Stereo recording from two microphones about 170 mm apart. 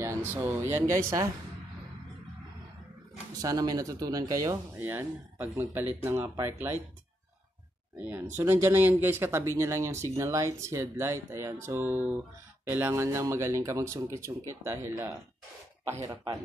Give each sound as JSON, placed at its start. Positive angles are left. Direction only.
{"t": 0.0, "sound": "speech", "side_deg": -15}
{"t": 3.3, "sound": "speech", "side_deg": -20}
{"t": 8.0, "sound": "speech", "side_deg": -10}